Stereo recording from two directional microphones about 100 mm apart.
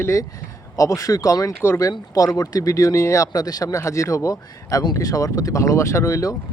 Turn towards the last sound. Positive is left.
turn(degrees=35)  # may be behind; listen again after turning